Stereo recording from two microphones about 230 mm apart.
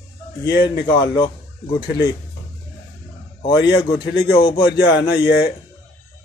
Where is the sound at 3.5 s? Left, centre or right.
Left.